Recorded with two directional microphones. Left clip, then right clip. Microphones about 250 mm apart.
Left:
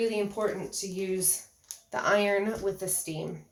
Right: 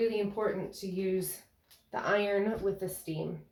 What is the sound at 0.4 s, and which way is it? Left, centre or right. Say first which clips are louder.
Speech: left 2 dB; left.